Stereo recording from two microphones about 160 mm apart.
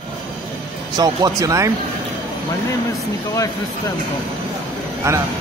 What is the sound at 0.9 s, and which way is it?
Speech, 25° right (ahead or behind).